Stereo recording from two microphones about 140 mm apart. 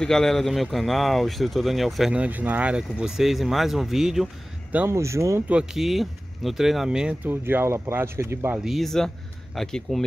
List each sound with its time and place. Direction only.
0.0 s speech: 5° left (ahead or behind)
4.7 s speech: 20° right (ahead or behind)
5.5 s speech: 5° right (ahead or behind)
8.5 s speech: centre (ahead or behind)